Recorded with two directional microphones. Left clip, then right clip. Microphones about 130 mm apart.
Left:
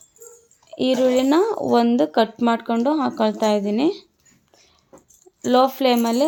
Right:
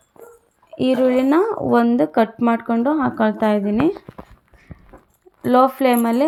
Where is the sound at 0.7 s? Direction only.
5° right (ahead or behind).